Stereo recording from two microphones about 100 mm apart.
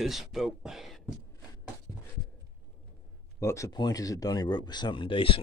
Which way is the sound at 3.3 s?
30° left (ahead or behind).